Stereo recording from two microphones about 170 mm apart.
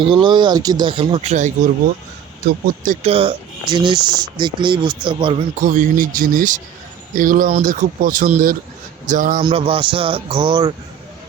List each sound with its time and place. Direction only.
0.0 s speech: 30° right (ahead or behind); by 1.7 s 45° right (ahead or behind)
2.4 s speech: 65° right (ahead or behind); by 5.4 s 30° right (ahead or behind)
5.5 s speech: 50° right (ahead or behind)
9.4 s speech: 30° right (ahead or behind)